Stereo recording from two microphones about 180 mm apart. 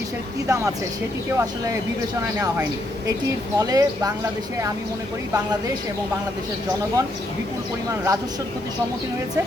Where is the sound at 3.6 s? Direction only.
20° right (ahead or behind).